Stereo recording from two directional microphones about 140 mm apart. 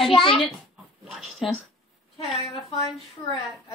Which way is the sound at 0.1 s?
40° left (ahead or behind).